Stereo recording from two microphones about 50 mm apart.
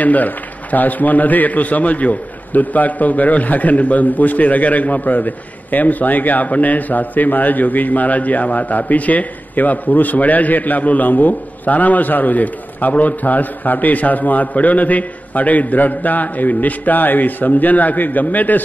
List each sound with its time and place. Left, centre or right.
0.0 s a man's voice: left